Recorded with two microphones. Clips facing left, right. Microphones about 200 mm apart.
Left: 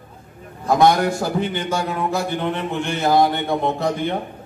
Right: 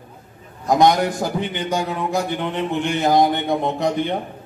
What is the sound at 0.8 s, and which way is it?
A man's voice, 15° right (ahead or behind).